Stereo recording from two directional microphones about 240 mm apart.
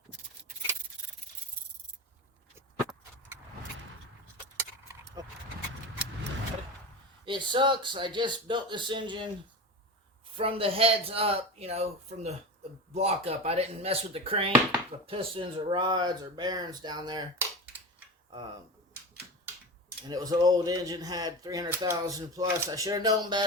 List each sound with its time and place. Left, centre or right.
2.6 s a sound: centre
4.5 s keys jangling: centre
7.3 s speech: centre
10.3 s speech: right
20.1 s speech: centre